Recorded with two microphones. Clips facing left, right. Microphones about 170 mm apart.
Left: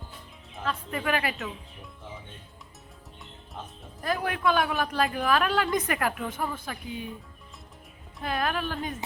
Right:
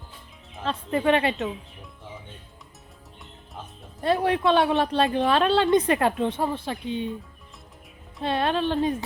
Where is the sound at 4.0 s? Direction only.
30° right (ahead or behind).